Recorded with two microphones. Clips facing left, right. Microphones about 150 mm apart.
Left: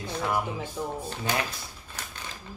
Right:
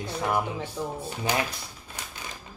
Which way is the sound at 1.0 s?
20° right (ahead or behind).